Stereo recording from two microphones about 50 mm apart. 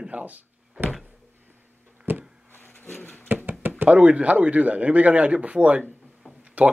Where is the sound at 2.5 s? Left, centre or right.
Left.